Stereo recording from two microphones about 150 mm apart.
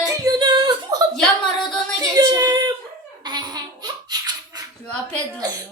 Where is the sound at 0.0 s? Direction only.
25° right (ahead or behind).